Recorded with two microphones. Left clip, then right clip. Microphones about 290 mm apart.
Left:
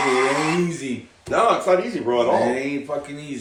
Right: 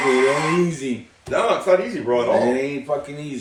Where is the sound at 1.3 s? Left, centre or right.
Centre.